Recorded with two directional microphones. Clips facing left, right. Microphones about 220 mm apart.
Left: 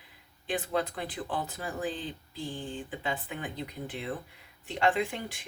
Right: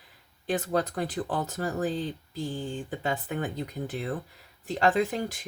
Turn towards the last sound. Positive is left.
turn(degrees=-40)  # may be behind; listen again after turning